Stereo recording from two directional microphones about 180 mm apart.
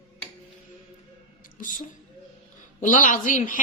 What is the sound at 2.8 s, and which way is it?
Speech, 45° left (ahead or behind).